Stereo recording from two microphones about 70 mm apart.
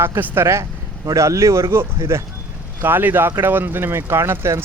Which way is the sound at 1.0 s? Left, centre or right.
Right.